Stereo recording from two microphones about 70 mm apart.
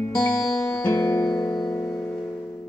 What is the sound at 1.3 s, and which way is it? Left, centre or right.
Music, left.